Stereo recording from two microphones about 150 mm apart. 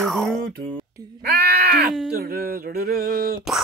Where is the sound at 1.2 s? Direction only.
90° right.